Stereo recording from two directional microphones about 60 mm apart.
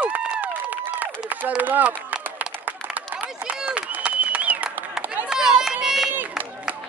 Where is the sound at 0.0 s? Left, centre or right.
Right.